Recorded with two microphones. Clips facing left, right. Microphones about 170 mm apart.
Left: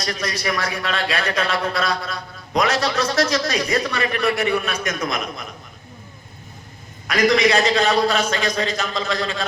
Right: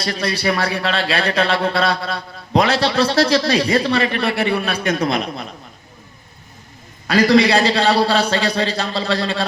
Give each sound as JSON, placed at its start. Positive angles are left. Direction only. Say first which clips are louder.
{"t": 0.0, "sound": "a man's voice", "louder": "right 4 dB", "side_deg": -30}
{"t": 7.1, "sound": "a man's voice", "louder": "right 4 dB", "side_deg": -30}